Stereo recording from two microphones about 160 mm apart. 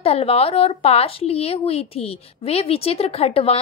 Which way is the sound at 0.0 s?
40° left (ahead or behind).